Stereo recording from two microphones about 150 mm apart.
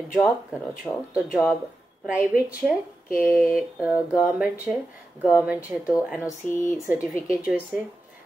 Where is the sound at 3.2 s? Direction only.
5° right (ahead or behind).